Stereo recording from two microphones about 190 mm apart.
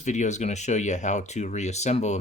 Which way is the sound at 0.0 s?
40° left (ahead or behind).